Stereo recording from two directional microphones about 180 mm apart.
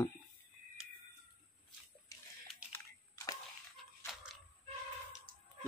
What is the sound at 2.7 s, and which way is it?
Camera, 15° left (ahead or behind).